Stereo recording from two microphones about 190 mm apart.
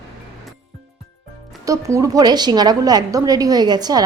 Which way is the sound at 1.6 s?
15° right (ahead or behind).